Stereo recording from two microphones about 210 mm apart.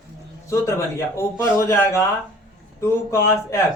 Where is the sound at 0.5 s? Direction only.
15° left (ahead or behind).